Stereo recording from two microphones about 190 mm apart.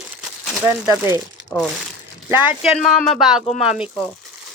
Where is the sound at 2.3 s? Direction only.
10° right (ahead or behind).